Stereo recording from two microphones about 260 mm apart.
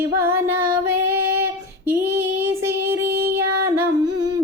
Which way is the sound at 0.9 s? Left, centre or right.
Centre.